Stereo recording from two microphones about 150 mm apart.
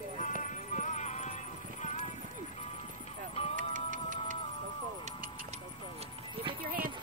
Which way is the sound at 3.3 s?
40° left (ahead or behind).